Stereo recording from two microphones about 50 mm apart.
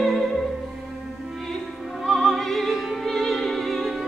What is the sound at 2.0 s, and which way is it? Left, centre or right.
Opera, centre.